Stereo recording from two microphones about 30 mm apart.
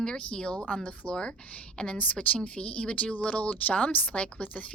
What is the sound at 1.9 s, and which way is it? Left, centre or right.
A woman's voice, left.